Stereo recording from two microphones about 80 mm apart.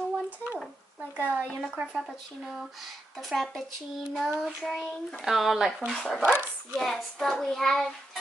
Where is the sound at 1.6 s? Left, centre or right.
Centre.